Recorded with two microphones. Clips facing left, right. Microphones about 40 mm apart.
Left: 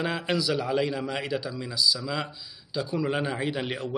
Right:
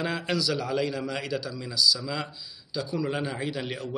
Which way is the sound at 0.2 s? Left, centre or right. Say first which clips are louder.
Left 1 dB; left.